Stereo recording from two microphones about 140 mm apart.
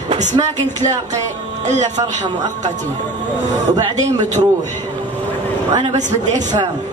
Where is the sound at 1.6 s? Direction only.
55° right (ahead or behind).